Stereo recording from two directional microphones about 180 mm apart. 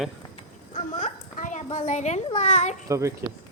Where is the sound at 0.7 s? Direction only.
40° left (ahead or behind).